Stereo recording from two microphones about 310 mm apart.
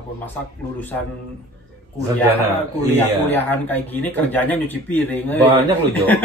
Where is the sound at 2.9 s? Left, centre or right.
Centre.